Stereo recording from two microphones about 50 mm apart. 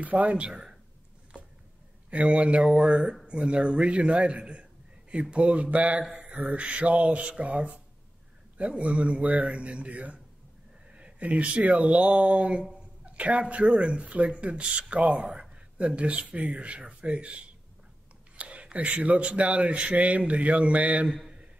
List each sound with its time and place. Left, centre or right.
0.0 s a man's voice: right
2.0 s a man's voice: right
21.1 s speech: centre